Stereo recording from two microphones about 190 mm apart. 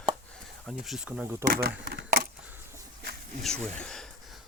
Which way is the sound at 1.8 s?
55° right (ahead or behind).